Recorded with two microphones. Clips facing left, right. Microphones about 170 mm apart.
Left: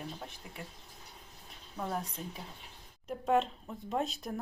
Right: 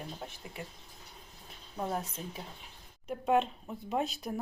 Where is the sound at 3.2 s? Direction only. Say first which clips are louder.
Right 1 dB; 5° right (ahead or behind).